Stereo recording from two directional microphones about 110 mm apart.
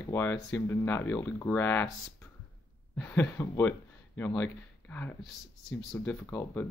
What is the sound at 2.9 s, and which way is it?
Speech, 20° left (ahead or behind).